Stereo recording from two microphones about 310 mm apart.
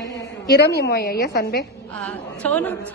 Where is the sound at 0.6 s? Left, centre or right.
Left.